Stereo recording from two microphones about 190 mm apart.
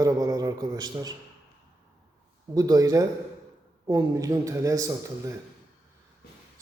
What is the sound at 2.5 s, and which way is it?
A man's voice, 20° right (ahead or behind).